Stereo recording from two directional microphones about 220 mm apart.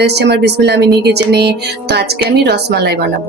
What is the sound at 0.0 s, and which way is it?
Speech, 50° right (ahead or behind).